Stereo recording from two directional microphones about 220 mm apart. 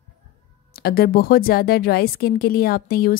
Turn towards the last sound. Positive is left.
turn(degrees=40)  # may be behind; listen again after turning